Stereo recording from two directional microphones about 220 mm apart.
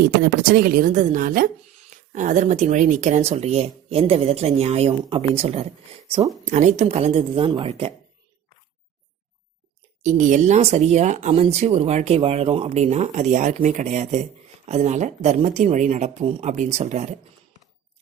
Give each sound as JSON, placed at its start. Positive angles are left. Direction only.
{"t": 0.2, "sound": "speech", "side_deg": -45}
{"t": 10.0, "sound": "speech", "side_deg": -35}